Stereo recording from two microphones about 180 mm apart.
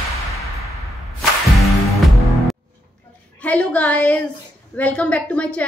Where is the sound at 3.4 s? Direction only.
10° left (ahead or behind).